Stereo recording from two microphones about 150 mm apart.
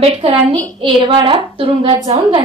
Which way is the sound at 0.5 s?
30° right (ahead or behind).